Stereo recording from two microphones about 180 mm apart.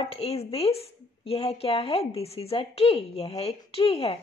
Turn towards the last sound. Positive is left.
turn(degrees=30)  # may be behind; listen again after turning